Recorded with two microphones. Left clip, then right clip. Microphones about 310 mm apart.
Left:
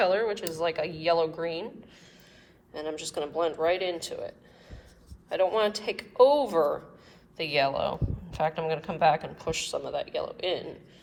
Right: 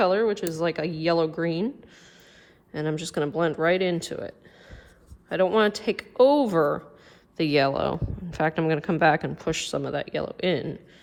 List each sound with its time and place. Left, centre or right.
0.0 s speech: centre
2.7 s speech: right
5.4 s speech: right